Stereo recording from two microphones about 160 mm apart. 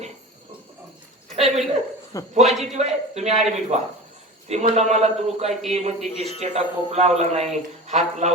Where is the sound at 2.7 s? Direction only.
45° right (ahead or behind).